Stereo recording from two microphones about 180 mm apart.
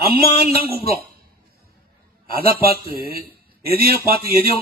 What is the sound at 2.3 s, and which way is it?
Speech, 55° right (ahead or behind).